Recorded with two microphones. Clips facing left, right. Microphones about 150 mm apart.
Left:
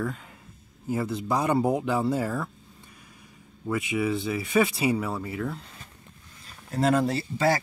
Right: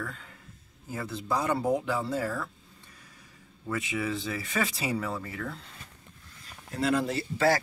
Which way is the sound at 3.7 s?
10° left (ahead or behind).